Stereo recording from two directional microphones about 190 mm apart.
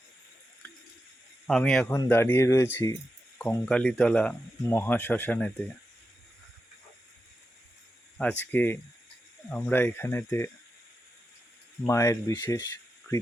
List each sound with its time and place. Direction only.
1.5 s speech: centre (ahead or behind)
8.2 s speech: 5° left (ahead or behind)
11.9 s speech: 15° left (ahead or behind)